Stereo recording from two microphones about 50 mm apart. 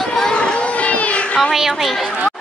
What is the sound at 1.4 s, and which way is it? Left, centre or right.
Speech, centre.